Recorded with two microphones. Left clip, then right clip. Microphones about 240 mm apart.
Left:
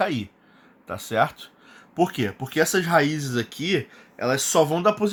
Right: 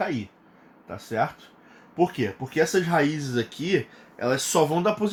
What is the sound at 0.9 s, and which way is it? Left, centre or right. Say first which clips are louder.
Speech: left 4 dB; left.